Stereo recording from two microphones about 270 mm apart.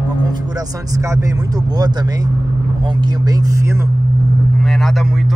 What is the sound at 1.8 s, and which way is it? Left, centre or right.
Speech, centre.